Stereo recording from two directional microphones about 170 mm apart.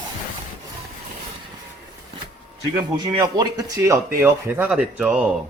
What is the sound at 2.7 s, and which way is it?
Speech, 25° right (ahead or behind).